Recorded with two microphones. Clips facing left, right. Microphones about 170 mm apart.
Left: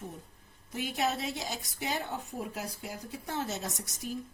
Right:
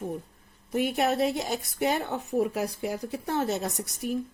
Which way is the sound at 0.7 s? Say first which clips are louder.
Right 7 dB; 60° right (ahead or behind).